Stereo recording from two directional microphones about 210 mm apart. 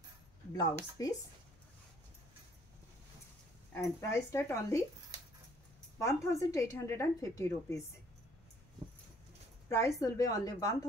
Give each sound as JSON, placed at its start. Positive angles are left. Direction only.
{"t": 1.0, "sound": "a woman's voice", "side_deg": 15}
{"t": 3.7, "sound": "a woman's voice", "side_deg": 10}
{"t": 5.9, "sound": "a woman's voice", "side_deg": 15}
{"t": 9.7, "sound": "a woman's voice", "side_deg": 15}